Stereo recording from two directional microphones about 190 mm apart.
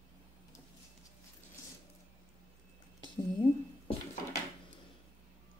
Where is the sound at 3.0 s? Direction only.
25° left (ahead or behind).